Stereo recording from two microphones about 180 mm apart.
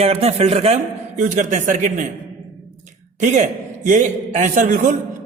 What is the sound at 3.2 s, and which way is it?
A man's voice, 40° right (ahead or behind).